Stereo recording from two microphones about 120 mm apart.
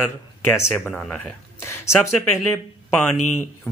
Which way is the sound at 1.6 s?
25° left (ahead or behind).